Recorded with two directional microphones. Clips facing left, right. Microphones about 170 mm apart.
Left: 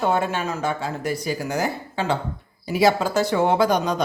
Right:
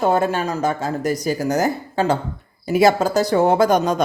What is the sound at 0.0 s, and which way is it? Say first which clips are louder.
Speech: right 4 dB; 40° right (ahead or behind).